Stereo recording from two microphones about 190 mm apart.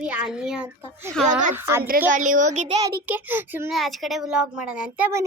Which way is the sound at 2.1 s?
40° right (ahead or behind).